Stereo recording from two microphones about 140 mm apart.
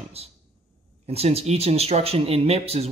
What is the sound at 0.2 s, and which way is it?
Speech, 45° right (ahead or behind).